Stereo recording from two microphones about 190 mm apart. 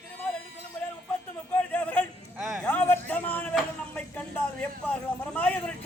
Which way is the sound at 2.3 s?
Centre (ahead or behind).